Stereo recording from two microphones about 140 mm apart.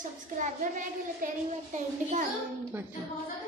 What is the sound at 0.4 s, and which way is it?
A child's voice, 70° right (ahead or behind).